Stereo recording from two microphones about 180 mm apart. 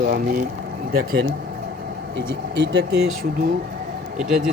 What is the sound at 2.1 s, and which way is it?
Speech, 80° right.